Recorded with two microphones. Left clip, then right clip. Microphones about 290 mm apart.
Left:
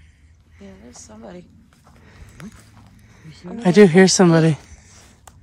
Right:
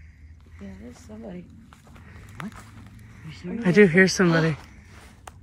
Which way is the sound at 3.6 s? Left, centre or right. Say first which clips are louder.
Left 5 dB; centre.